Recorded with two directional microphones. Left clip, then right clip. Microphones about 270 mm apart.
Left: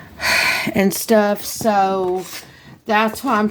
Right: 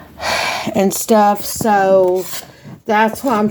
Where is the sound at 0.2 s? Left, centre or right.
Left.